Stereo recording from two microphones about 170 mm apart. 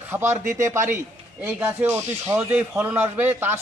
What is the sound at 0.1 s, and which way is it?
Speech, 15° right (ahead or behind).